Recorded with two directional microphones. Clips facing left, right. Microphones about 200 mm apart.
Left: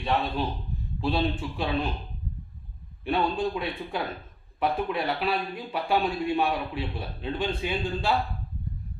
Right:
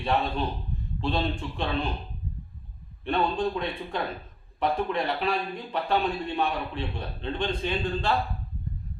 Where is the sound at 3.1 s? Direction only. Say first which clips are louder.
Even; 10° left (ahead or behind).